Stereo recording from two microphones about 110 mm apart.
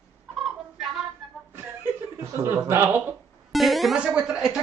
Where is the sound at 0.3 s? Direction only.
Centre (ahead or behind).